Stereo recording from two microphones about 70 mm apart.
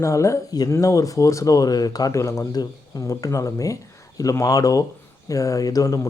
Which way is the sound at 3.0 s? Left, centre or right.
Left.